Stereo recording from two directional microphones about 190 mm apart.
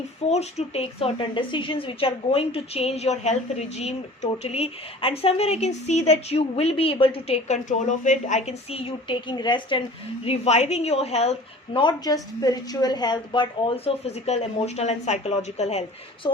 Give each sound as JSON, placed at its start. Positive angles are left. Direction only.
{"t": 0.3, "sound": "a woman's voice", "side_deg": 35}
{"t": 10.2, "sound": "a woman's voice", "side_deg": 35}
{"t": 16.2, "sound": "a woman's voice", "side_deg": 20}